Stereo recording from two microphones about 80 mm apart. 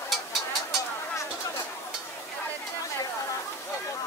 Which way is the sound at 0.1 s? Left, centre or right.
Centre.